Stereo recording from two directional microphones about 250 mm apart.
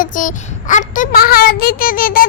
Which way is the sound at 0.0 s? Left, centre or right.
Left.